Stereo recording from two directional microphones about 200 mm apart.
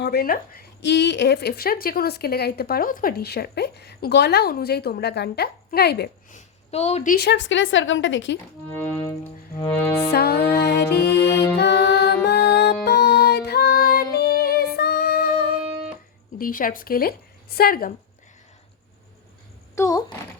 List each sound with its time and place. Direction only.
0.0 s speech: 50° left (ahead or behind)
6.3 s a woman's voice: 30° left (ahead or behind); by 8.4 s 70° left (ahead or behind)
8.7 s music: 15° left (ahead or behind)
10.1 s music: 50° left (ahead or behind)
16.4 s speech: 45° left (ahead or behind)
19.7 s speech: 15° left (ahead or behind)